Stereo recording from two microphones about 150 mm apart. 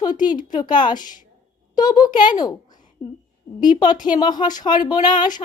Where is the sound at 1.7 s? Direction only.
25° left (ahead or behind).